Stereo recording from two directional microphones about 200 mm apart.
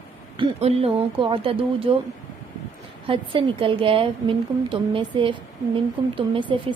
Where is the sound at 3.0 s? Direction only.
25° right (ahead or behind).